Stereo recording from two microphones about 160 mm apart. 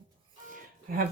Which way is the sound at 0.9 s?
65° right (ahead or behind).